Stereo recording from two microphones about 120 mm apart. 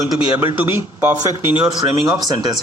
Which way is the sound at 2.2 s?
35° right (ahead or behind).